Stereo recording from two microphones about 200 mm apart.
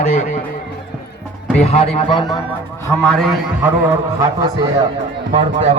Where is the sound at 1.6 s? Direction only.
30° left (ahead or behind).